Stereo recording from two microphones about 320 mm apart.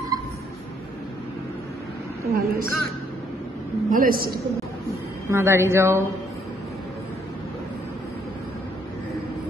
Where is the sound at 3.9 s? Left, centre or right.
Right.